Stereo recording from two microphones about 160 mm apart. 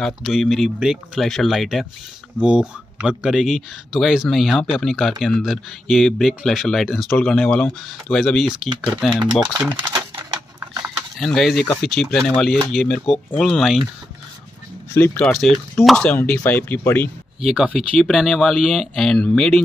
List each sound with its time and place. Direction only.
0.0 s speech: centre (ahead or behind)
9.4 s speech: 10° right (ahead or behind)
9.8 s a sound: 25° right (ahead or behind)
11.1 s speech: centre (ahead or behind)
15.0 s speech: 5° left (ahead or behind)
17.5 s speech: 5° right (ahead or behind)